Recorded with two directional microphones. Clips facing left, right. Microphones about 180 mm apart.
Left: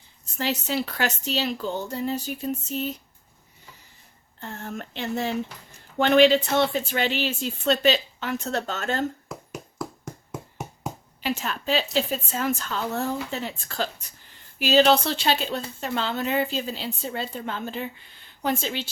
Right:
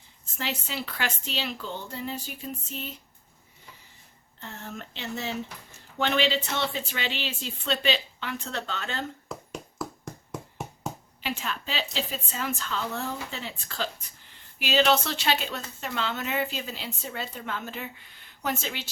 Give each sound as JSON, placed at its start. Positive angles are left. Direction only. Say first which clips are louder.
{"t": 0.3, "sound": "speech", "louder": "left 7 dB", "side_deg": 40}
{"t": 4.4, "sound": "speech", "louder": "left 5 dB", "side_deg": 50}
{"t": 9.3, "sound": "a sound", "louder": "left 1 dB", "side_deg": 0}
{"t": 11.2, "sound": "speech", "louder": "left 5 dB", "side_deg": 45}